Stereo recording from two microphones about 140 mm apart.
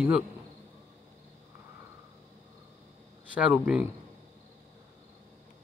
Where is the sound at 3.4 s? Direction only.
10° right (ahead or behind).